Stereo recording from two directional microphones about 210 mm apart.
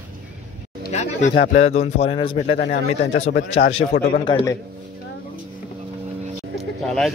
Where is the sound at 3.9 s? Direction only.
50° left (ahead or behind).